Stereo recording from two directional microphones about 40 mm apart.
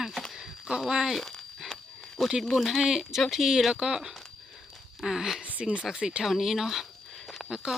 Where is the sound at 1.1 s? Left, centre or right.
Centre.